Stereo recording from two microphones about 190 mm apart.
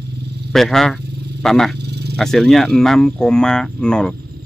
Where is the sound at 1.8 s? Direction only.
60° right (ahead or behind).